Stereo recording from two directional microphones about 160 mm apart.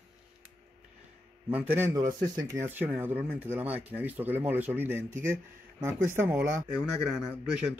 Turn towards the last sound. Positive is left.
turn(degrees=-5)  # may be behind; listen again after turning